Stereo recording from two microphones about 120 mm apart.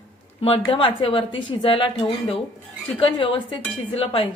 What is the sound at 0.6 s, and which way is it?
Speech, 45° left (ahead or behind).